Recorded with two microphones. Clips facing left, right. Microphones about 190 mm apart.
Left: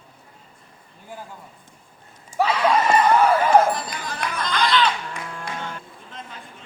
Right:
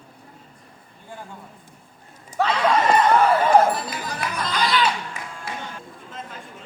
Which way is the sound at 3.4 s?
5° right (ahead or behind).